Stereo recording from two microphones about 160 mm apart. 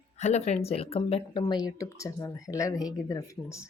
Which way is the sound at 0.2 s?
45° left (ahead or behind).